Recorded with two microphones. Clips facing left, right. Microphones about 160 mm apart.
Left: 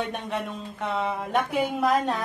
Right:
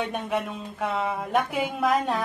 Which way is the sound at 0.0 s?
Centre (ahead or behind).